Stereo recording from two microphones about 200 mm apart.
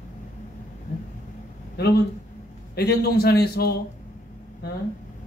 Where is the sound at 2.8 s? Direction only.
50° left (ahead or behind).